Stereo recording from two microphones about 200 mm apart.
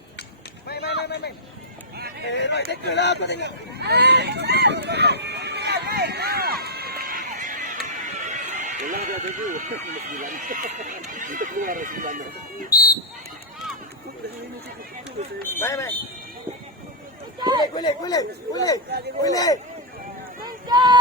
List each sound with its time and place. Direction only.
0.7 s a sound: 55° left (ahead or behind)
2.2 s speech: 60° left (ahead or behind)
3.4 s a sound: 55° right (ahead or behind)
7.9 s speech: 35° right (ahead or behind)
12.7 s speech: 50° left (ahead or behind)
15.4 s speech: 10° left (ahead or behind)
17.6 s speech: 20° left (ahead or behind)
20.7 s speech: 20° right (ahead or behind)